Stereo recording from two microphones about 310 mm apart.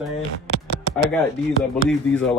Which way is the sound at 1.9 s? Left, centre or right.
Centre.